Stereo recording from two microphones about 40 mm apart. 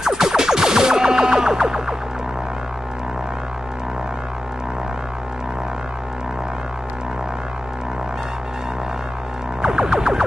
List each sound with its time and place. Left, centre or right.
0.0 s music: centre
9.6 s music: centre